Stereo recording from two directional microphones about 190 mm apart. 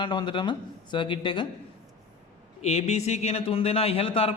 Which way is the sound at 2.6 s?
35° left (ahead or behind).